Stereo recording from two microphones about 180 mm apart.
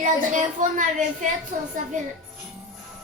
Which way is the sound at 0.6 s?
45° right (ahead or behind).